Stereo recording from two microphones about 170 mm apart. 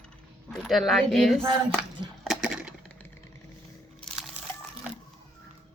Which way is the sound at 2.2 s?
Centre (ahead or behind).